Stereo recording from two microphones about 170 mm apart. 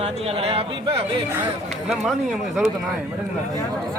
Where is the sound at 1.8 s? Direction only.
Centre (ahead or behind).